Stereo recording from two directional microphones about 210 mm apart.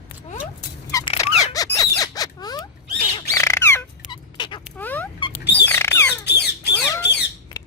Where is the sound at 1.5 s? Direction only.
15° left (ahead or behind).